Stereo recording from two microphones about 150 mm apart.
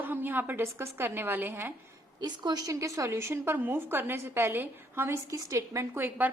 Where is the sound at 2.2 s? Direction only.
25° right (ahead or behind).